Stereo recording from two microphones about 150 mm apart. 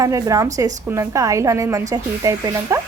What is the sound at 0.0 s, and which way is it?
A woman's voice, 20° right (ahead or behind).